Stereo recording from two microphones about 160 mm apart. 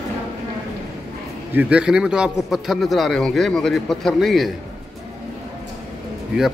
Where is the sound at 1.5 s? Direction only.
5° right (ahead or behind).